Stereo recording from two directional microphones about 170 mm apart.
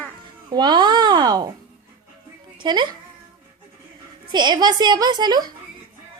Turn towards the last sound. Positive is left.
turn(degrees=-25)  # may be behind; listen again after turning